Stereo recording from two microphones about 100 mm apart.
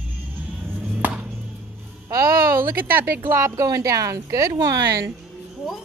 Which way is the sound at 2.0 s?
25° right (ahead or behind).